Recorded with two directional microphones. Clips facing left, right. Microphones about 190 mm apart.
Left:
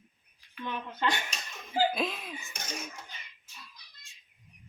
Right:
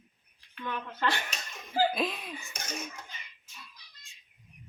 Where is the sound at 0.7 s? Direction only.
20° left (ahead or behind).